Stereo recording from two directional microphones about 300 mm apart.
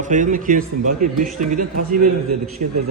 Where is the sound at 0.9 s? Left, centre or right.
Right.